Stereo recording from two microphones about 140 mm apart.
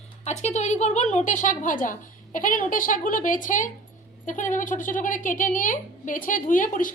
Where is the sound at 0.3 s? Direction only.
55° left (ahead or behind).